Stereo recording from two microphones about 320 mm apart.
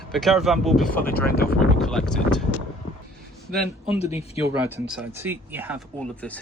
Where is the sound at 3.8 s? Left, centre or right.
Centre.